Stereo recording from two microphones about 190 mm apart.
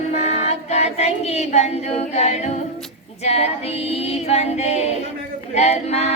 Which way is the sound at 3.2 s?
35° left (ahead or behind).